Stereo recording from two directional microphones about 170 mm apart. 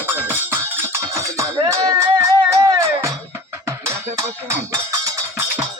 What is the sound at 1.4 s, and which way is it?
Music, 20° right (ahead or behind).